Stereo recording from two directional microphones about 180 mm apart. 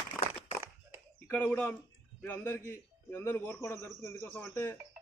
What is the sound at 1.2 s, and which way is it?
A man's voice, 10° left (ahead or behind).